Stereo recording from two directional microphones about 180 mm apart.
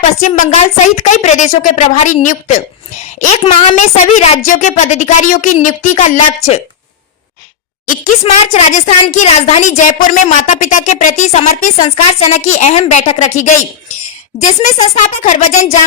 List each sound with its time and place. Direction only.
0.0 s speech: 45° left (ahead or behind)
3.8 s a woman's voice: 40° left (ahead or behind)
8.3 s a woman's voice: 40° left (ahead or behind)